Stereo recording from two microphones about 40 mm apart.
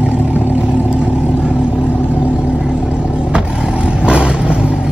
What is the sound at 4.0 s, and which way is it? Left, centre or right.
Vehicle, right.